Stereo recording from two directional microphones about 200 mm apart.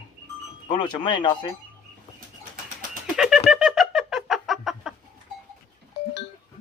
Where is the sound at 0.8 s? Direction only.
25° left (ahead or behind).